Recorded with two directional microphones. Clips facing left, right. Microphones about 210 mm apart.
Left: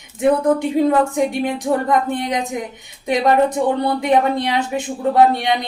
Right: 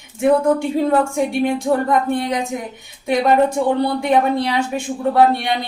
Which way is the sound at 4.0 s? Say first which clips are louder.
Even; 20° left (ahead or behind).